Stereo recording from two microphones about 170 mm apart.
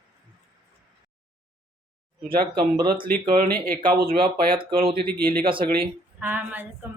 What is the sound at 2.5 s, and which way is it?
Speech, 25° right (ahead or behind).